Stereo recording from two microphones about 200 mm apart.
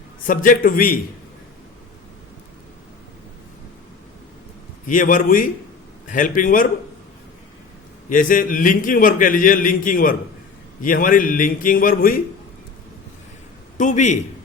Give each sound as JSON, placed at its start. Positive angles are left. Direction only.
{"t": 0.3, "sound": "a man's voice", "side_deg": 45}
{"t": 4.9, "sound": "a man's voice", "side_deg": 40}
{"t": 8.1, "sound": "a man's voice", "side_deg": 40}
{"t": 13.7, "sound": "a man's voice", "side_deg": 40}